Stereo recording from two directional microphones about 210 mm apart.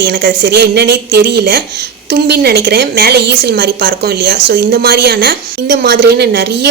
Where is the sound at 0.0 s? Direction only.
50° right (ahead or behind).